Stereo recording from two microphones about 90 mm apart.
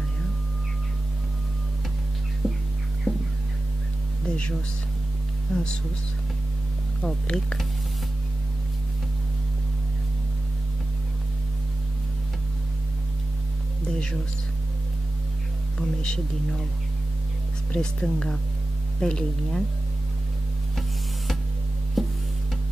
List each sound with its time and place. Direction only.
2.4 s music: centre (ahead or behind)
4.3 s speech: 10° left (ahead or behind)
7.0 s speech: 5° left (ahead or behind)
13.8 s speech: 10° left (ahead or behind)
15.8 s speech: 10° left (ahead or behind)
17.7 s speech: 5° left (ahead or behind)
22.0 s music: centre (ahead or behind)